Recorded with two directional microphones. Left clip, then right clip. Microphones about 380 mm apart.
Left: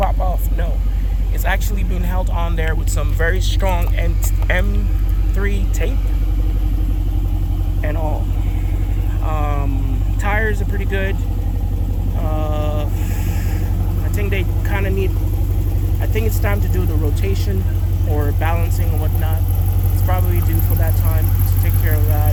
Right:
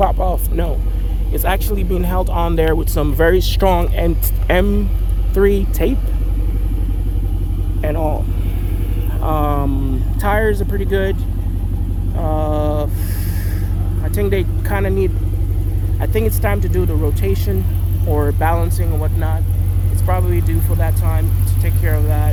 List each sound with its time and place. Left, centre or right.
0.1 s vehicle: right
1.5 s speech: right
7.8 s speech: right
9.2 s vehicle: right
10.2 s speech: centre
12.2 s vehicle: centre
14.2 s speech: centre
21.8 s speech: centre